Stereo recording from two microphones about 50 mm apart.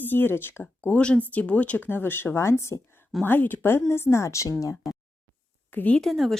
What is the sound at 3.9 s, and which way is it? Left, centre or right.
Speech, left.